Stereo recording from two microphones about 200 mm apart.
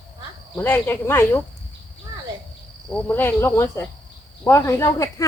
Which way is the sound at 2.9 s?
10° left (ahead or behind).